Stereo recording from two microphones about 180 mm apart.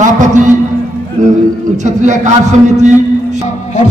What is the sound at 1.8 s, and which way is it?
Speech, 40° right (ahead or behind).